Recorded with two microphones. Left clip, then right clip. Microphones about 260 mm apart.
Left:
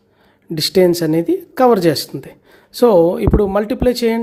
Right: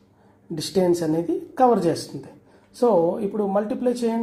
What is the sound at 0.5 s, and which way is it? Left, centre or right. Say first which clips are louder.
Speech: left 8 dB; left.